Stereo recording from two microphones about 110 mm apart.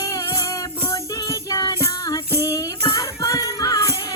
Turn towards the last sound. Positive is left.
turn(degrees=30)  # may be behind; listen again after turning